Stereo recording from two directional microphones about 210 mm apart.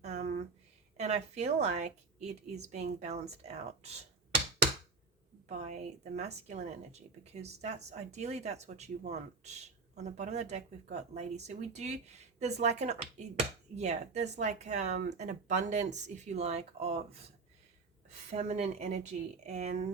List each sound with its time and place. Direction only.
0.0 s a sound: 35° right (ahead or behind)
0.9 s speech: 30° right (ahead or behind)
5.5 s speech: 35° right (ahead or behind)
18.3 s speech: 35° right (ahead or behind)